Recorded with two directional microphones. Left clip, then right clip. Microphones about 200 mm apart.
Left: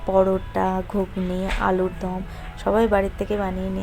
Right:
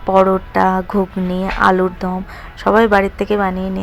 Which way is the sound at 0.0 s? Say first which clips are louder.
Right 7 dB; 20° right (ahead or behind).